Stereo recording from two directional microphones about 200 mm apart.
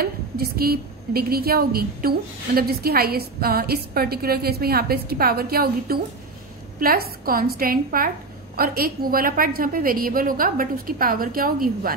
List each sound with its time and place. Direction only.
0.0 s a woman's voice: 50° right (ahead or behind)